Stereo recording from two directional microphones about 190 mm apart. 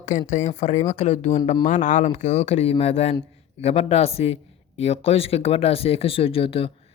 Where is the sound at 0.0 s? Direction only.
40° left (ahead or behind).